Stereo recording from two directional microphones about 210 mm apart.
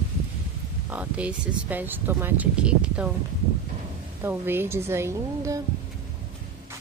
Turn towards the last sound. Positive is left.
turn(degrees=-15)  # may be behind; listen again after turning